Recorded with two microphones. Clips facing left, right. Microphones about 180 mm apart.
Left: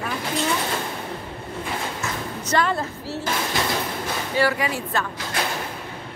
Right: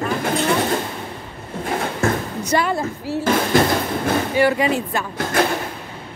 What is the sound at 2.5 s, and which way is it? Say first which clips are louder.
Speech: right 2 dB; 10° right (ahead or behind).